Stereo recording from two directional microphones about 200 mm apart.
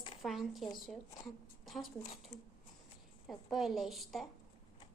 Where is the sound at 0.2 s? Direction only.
Centre (ahead or behind).